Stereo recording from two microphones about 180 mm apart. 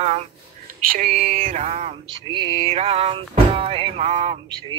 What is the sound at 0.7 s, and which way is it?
Music, 45° right (ahead or behind).